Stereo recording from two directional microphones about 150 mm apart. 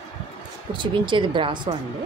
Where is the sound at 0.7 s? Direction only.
30° right (ahead or behind).